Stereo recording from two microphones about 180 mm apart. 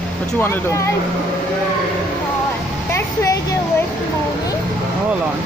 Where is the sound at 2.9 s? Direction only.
15° left (ahead or behind).